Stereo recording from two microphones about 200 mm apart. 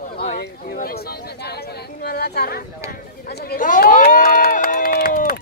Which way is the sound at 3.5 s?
45° left (ahead or behind).